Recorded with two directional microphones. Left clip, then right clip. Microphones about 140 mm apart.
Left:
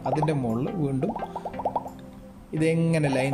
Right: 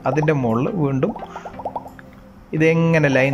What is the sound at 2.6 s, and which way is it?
Speech, 20° left (ahead or behind).